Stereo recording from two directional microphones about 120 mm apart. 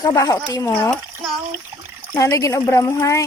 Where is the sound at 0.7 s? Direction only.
15° left (ahead or behind).